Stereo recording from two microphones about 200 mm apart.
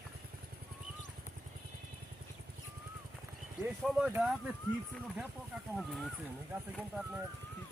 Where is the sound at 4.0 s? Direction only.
5° right (ahead or behind).